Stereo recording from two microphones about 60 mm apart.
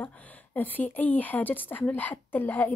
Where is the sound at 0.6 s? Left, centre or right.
Left.